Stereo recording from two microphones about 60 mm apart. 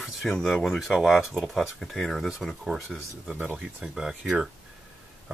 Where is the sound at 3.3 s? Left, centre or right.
Right.